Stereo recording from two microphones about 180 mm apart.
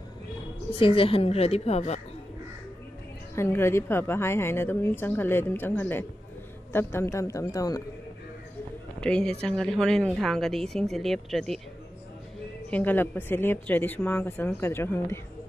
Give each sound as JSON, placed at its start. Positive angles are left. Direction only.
{"t": 0.7, "sound": "speech", "side_deg": 30}
{"t": 3.3, "sound": "a woman's voice", "side_deg": 15}
{"t": 9.0, "sound": "a woman's voice", "side_deg": 5}
{"t": 12.6, "sound": "a woman's voice", "side_deg": 10}